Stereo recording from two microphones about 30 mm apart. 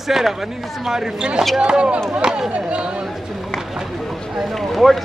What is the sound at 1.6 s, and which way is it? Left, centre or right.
Speech, right.